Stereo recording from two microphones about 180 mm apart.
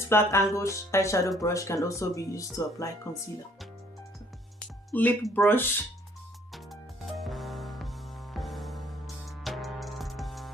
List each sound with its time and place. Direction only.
0.1 s speech: 15° left (ahead or behind)
4.9 s speech: 5° left (ahead or behind)
6.5 s music: centre (ahead or behind)